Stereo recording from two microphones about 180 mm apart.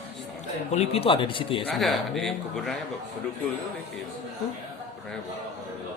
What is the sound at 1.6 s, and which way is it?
Speech, centre (ahead or behind).